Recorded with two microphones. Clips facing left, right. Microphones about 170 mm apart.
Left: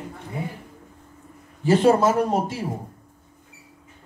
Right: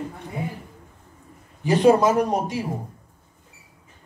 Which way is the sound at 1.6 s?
15° right (ahead or behind).